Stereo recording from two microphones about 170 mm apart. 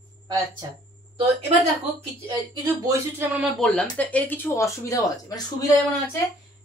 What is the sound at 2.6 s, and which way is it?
Speech, 15° right (ahead or behind).